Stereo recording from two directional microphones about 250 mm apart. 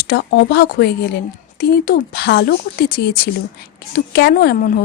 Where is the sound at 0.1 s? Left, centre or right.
Left.